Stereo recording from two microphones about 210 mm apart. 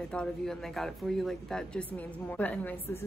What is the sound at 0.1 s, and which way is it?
A woman's voice, 5° left (ahead or behind).